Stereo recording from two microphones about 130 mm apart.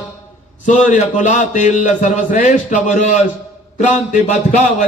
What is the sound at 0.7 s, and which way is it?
A man's voice, 75° left (ahead or behind).